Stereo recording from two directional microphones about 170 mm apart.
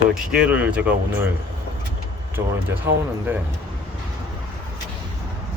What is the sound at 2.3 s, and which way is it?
Speech, 10° right (ahead or behind).